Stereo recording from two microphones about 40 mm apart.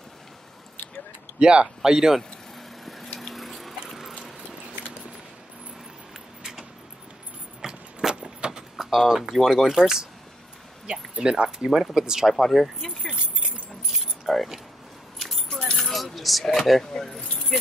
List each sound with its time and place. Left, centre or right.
1.4 s speech: right
2.8 s a sound: centre
3.3 s water: centre
7.6 s a sound: centre
8.1 s vehicle: right
8.7 s speech: centre
11.1 s speech: right
12.4 s speech: centre
13.0 s speech: left
13.9 s keys jangling: centre
16.9 s speech: centre
17.2 s speech: left